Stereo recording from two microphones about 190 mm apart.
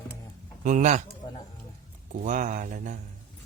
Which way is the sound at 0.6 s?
40° right (ahead or behind).